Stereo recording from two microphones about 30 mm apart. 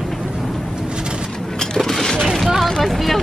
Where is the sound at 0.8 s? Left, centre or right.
Right.